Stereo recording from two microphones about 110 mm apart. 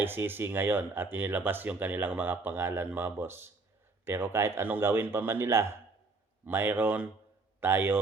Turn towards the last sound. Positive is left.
turn(degrees=-20)  # may be behind; listen again after turning